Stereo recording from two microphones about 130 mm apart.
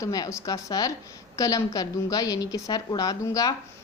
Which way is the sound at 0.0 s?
25° left (ahead or behind).